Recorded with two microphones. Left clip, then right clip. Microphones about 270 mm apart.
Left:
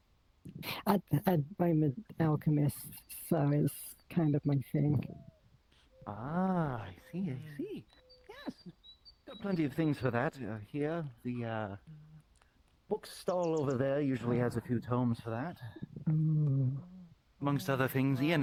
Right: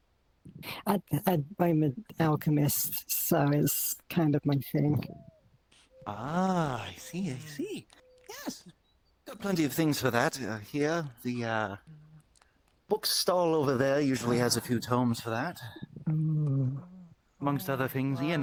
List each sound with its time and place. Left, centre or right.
0.6 s speech: centre
1.5 s speech: right
6.1 s speech: right
8.3 s a sound: right
9.2 s speech: right
12.9 s speech: right
16.0 s a sound: centre
16.6 s a sound: right
17.4 s speech: centre